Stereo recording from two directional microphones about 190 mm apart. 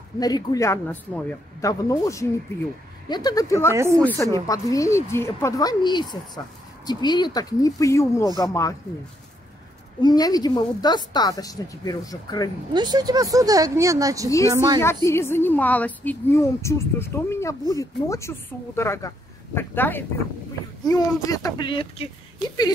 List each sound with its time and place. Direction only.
0.2 s a woman's voice: 20° left (ahead or behind)
3.7 s a woman's voice: 15° right (ahead or behind)
4.0 s a woman's voice: 15° left (ahead or behind)
10.0 s a woman's voice: 20° left (ahead or behind)
12.7 s a woman's voice: 20° right (ahead or behind)
15.0 s a woman's voice: 15° left (ahead or behind); by 22.1 s 30° left (ahead or behind)